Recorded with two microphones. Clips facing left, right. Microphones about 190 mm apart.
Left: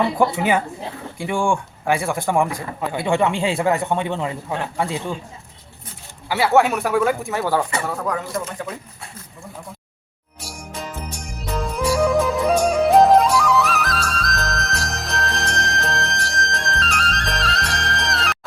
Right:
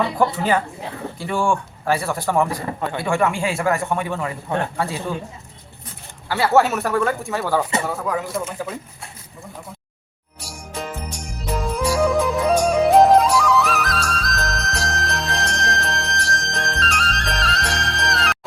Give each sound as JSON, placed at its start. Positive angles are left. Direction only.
{"t": 0.3, "sound": "a man's voice", "side_deg": 10}
{"t": 6.2, "sound": "speech", "side_deg": 10}
{"t": 6.5, "sound": "speech", "side_deg": 0}
{"t": 10.4, "sound": "music", "side_deg": 0}